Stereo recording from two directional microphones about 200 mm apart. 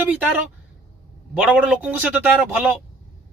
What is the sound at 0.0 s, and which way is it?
Speech, 5° right (ahead or behind).